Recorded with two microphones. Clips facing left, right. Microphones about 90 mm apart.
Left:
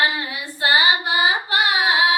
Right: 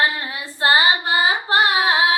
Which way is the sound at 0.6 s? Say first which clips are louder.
Right 1 dB; 35° right (ahead or behind).